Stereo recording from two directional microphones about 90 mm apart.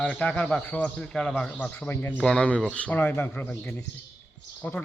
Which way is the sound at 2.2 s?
10° left (ahead or behind).